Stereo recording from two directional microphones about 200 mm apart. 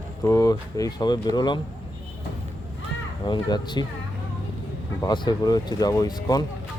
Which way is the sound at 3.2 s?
20° left (ahead or behind).